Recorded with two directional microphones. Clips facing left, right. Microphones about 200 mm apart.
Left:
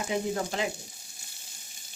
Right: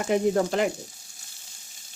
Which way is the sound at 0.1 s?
60° right (ahead or behind).